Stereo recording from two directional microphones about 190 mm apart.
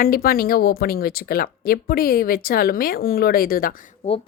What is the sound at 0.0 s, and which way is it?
Speech, 50° left (ahead or behind).